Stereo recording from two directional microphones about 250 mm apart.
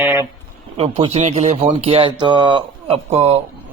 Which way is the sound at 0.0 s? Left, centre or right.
Centre.